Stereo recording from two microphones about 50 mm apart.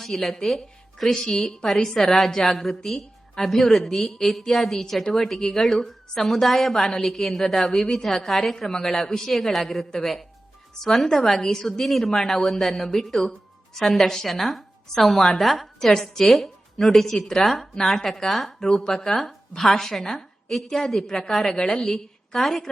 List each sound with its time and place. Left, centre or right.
0.0 s a woman's voice: centre